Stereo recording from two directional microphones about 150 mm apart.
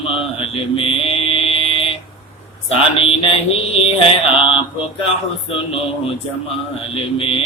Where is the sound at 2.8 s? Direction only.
40° left (ahead or behind).